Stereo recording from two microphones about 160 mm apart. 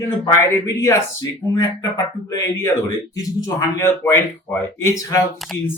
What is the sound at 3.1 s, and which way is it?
Speech, 20° left (ahead or behind).